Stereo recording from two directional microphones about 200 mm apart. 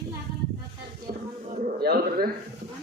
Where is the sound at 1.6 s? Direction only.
45° right (ahead or behind).